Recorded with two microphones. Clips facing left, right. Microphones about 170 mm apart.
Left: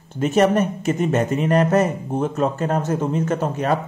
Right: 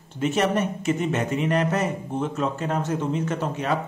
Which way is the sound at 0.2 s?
45° left (ahead or behind).